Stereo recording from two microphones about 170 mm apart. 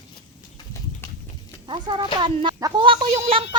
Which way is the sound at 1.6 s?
25° right (ahead or behind).